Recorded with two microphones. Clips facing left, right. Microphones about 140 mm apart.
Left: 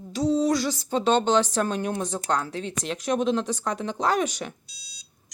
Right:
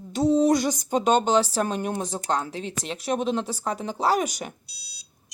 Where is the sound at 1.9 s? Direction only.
30° right (ahead or behind).